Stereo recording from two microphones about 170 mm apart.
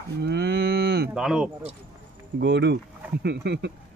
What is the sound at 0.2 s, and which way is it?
Cattle, 70° right (ahead or behind).